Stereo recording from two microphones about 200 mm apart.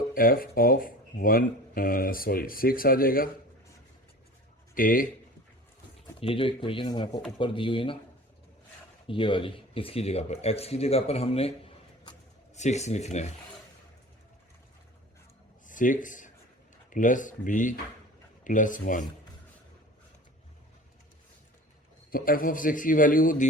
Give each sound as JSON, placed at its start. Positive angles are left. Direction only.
{"t": 0.1, "sound": "speech", "side_deg": 45}
{"t": 4.7, "sound": "speech", "side_deg": 45}
{"t": 6.1, "sound": "speech", "side_deg": 25}
{"t": 9.0, "sound": "speech", "side_deg": 25}
{"t": 15.6, "sound": "speech", "side_deg": 40}
{"t": 22.1, "sound": "speech", "side_deg": 45}